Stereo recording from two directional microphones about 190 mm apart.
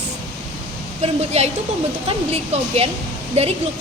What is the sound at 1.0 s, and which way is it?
A woman's voice, 35° right (ahead or behind).